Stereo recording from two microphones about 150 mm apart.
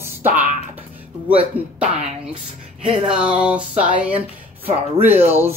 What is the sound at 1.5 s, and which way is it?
Speech, 40° right (ahead or behind).